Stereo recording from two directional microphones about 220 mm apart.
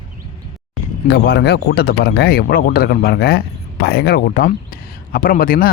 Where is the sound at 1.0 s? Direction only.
50° left (ahead or behind).